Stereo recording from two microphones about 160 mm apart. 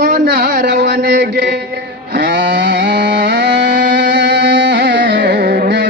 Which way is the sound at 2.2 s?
90° right.